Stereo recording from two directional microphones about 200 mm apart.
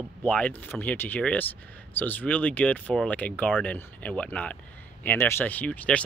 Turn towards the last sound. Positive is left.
turn(degrees=5)  # may be behind; listen again after turning